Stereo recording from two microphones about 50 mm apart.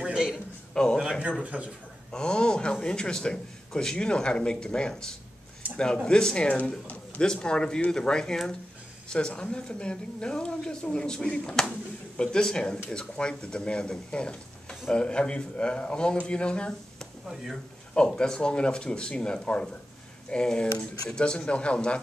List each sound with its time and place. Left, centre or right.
0.0 s a sound: centre
0.8 s a man's voice: centre
1.4 s speech: right
2.0 s a man's voice: centre
11.2 s a man's voice: left
12.2 s a man's voice: centre